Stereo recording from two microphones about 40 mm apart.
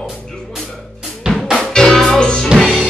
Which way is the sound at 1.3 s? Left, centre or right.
Centre.